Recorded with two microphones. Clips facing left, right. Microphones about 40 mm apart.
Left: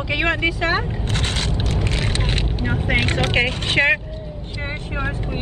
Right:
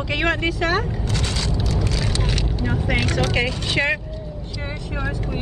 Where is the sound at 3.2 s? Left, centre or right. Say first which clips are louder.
Left 2 dB; left.